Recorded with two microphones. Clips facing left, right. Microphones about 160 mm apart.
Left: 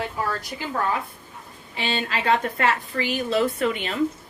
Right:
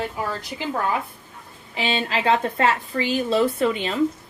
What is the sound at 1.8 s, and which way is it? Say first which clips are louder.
A woman's voice: right 3 dB; 30° right (ahead or behind).